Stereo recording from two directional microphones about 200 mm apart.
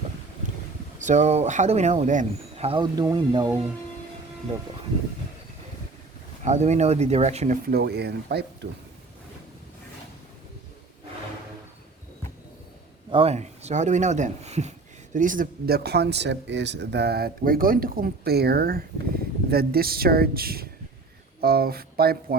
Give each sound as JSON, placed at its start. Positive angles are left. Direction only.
{"t": 0.9, "sound": "speech", "side_deg": -35}
{"t": 6.4, "sound": "speech", "side_deg": -35}
{"t": 13.1, "sound": "speech", "side_deg": -30}